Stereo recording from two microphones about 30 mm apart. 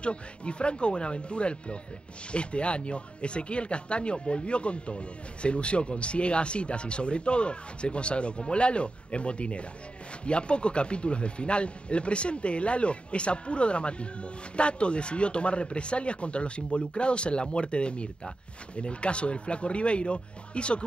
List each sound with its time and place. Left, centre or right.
0.0 s speech: left